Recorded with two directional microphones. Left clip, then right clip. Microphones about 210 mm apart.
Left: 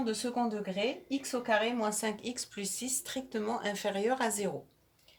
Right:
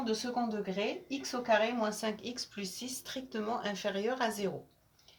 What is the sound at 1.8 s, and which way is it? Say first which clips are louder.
Speech: left 1 dB; 30° left (ahead or behind).